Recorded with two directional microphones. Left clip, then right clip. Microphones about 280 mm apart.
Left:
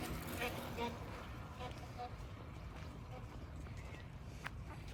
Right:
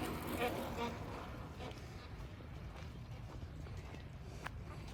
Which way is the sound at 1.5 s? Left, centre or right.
Centre.